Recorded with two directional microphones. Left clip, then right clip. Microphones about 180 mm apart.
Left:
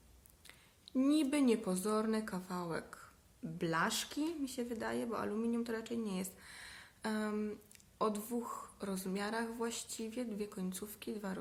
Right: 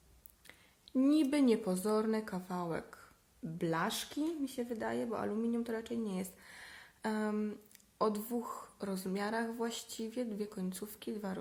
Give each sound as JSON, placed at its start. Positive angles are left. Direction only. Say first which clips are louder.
{"t": 0.4, "sound": "speech", "louder": "even", "side_deg": -25}